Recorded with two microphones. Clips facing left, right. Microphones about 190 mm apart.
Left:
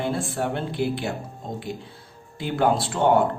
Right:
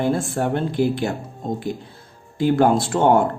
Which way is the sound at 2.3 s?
45° right (ahead or behind).